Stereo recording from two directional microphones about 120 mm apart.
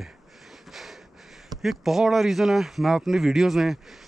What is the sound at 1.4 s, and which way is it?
Speech, centre (ahead or behind).